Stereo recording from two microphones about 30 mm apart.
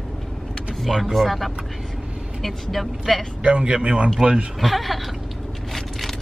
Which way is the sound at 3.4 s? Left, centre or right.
Right.